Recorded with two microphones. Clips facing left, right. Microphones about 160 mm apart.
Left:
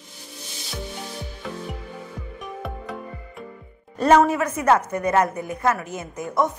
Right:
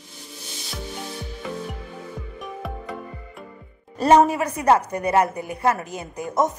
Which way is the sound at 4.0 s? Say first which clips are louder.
Right 1 dB; 35° right (ahead or behind).